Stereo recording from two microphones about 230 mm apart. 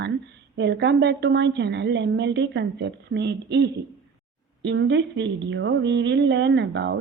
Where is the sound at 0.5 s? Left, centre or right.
Right.